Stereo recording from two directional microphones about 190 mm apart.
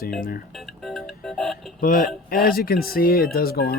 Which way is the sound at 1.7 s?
45° left (ahead or behind).